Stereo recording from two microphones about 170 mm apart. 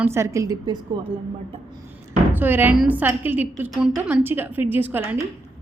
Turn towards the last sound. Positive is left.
turn(degrees=-10)  # may be behind; listen again after turning